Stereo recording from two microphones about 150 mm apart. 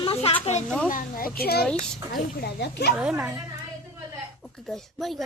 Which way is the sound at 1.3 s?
90° left.